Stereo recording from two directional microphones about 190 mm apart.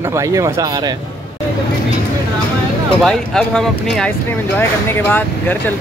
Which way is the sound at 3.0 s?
Centre (ahead or behind).